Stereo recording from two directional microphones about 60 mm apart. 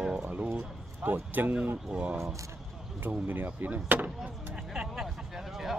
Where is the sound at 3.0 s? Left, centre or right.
Right.